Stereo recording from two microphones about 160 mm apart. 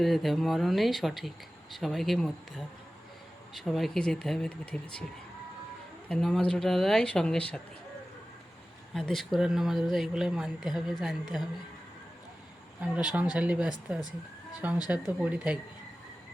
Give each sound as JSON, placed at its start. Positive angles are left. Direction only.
{"t": 0.0, "sound": "speech", "side_deg": 0}
{"t": 3.5, "sound": "speech", "side_deg": 0}
{"t": 6.1, "sound": "speech", "side_deg": 5}
{"t": 9.0, "sound": "speech", "side_deg": 0}
{"t": 12.8, "sound": "speech", "side_deg": -5}